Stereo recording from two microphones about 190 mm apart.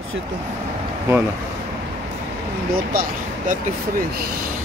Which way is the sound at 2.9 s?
50° right (ahead or behind).